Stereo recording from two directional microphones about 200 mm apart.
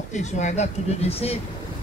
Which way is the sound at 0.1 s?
35° left (ahead or behind).